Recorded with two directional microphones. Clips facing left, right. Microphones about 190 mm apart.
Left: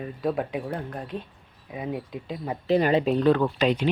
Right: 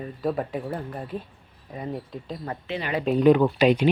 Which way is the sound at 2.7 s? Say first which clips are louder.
Left 11 dB; 40° left (ahead or behind).